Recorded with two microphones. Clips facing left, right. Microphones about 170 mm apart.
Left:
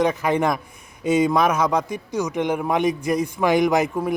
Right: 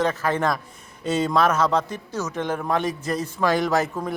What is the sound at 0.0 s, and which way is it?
A man's voice, 15° left (ahead or behind).